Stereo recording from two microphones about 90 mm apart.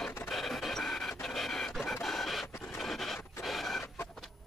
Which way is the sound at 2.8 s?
Centre (ahead or behind).